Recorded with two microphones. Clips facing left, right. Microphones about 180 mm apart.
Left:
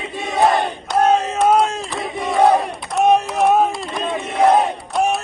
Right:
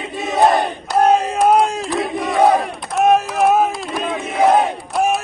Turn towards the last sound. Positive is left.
turn(degrees=0)  # may be behind; listen again after turning